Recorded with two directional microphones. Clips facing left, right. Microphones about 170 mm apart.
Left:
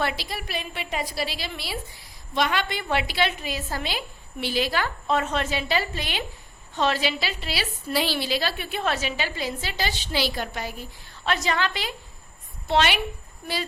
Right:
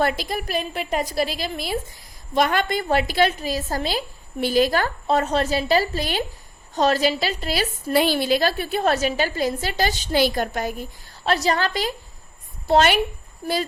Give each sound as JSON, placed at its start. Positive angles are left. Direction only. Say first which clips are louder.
{"t": 0.0, "sound": "a woman's voice", "louder": "right 6 dB", "side_deg": -45}